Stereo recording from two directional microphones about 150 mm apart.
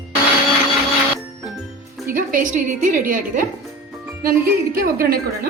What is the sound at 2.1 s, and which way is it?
A woman's voice, 65° right (ahead or behind).